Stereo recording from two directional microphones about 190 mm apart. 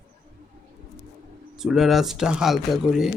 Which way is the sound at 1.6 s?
Centre (ahead or behind).